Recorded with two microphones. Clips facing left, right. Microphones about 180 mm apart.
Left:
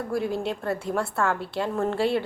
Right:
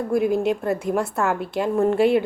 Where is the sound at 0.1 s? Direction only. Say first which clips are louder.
Right 8 dB; 15° right (ahead or behind).